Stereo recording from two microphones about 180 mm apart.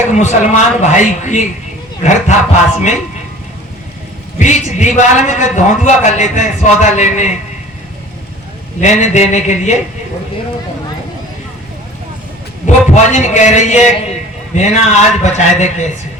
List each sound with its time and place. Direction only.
0.1 s a man's voice: 40° left (ahead or behind)
4.4 s a man's voice: 40° left (ahead or behind)
8.8 s a man's voice: 40° left (ahead or behind)
12.6 s a man's voice: 40° left (ahead or behind)